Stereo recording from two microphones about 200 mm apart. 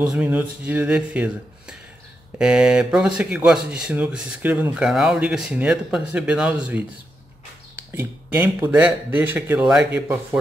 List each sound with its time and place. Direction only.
0.0 s speech: 5° right (ahead or behind)
7.9 s speech: 10° right (ahead or behind)